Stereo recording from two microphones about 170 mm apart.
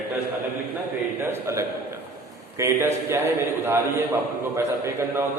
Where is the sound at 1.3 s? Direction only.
15° right (ahead or behind).